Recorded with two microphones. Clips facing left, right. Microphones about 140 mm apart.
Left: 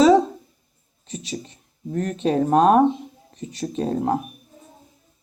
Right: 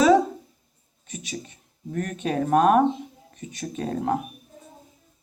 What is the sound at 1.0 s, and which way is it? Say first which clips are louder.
Speech: left 4 dB; 30° left (ahead or behind).